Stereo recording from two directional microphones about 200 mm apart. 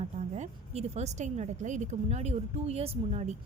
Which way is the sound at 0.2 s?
35° right (ahead or behind).